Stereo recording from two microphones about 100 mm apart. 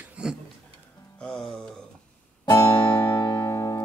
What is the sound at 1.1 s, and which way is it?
Music, 5° left (ahead or behind).